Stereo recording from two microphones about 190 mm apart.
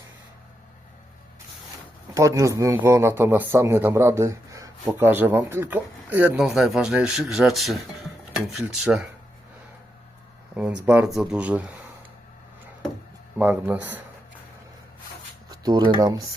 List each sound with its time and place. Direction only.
2.1 s speech: 20° right (ahead or behind)
10.5 s speech: 5° right (ahead or behind)
13.4 s speech: 10° right (ahead or behind)
15.4 s speech: 20° right (ahead or behind)